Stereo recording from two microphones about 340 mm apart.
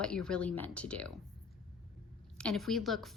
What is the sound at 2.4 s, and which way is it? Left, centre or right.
Speech, centre.